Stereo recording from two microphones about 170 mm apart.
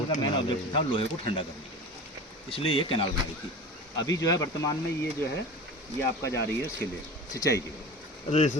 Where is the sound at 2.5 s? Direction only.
30° left (ahead or behind).